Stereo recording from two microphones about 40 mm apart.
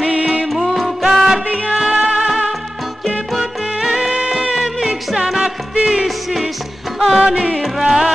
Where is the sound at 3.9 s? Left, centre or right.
Right.